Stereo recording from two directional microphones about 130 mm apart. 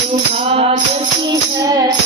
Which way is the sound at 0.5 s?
50° right (ahead or behind).